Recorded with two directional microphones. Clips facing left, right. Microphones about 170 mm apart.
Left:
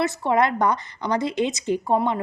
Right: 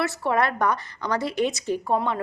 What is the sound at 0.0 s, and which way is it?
A woman's voice, 15° left (ahead or behind).